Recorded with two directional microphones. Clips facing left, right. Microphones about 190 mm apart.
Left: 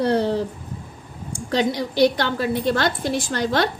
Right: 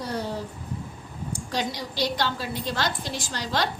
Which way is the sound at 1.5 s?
55° left (ahead or behind).